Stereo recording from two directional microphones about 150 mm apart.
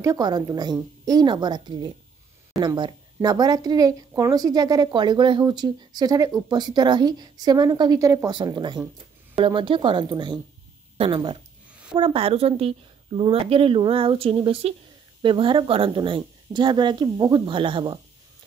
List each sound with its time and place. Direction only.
0.0 s a woman's voice: 25° right (ahead or behind)